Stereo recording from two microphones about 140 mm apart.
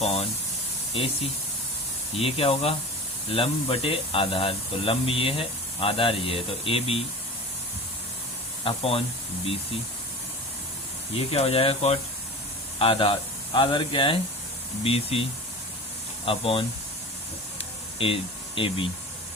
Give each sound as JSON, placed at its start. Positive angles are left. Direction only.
{"t": 0.0, "sound": "speech", "side_deg": 45}
{"t": 8.6, "sound": "speech", "side_deg": 45}
{"t": 11.1, "sound": "speech", "side_deg": 45}
{"t": 18.0, "sound": "speech", "side_deg": 40}